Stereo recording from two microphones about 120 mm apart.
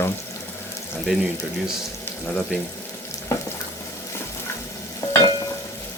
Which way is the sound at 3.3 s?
25° left (ahead or behind).